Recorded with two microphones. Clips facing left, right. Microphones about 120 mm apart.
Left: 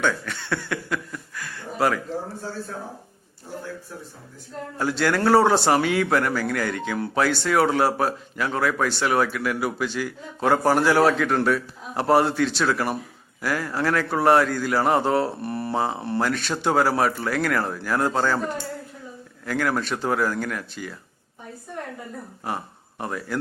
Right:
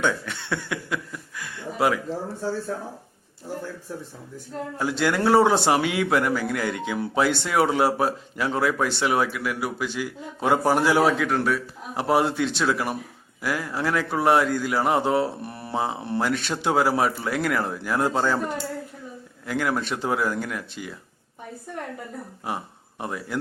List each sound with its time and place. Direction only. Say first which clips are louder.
0.0 s a sound: even; 20° right (ahead or behind)
4.8 s a man's voice: left 1 dB; 15° right (ahead or behind)
16.3 s a sound: even; 20° right (ahead or behind)
16.6 s a man's voice: left 1 dB; 10° right (ahead or behind)
19.5 s a man's voice: left 1 dB; 10° right (ahead or behind)
22.4 s speech: left 1 dB; 10° right (ahead or behind)